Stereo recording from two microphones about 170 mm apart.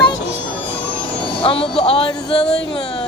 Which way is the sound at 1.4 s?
35° left (ahead or behind).